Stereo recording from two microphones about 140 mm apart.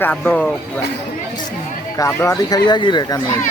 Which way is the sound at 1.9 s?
20° left (ahead or behind).